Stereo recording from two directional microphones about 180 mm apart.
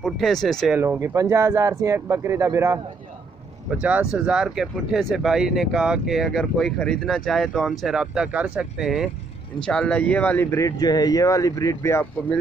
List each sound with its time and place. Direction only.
0.0 s speech: centre (ahead or behind)
0.7 s speech: 15° right (ahead or behind); by 12.4 s 10° left (ahead or behind)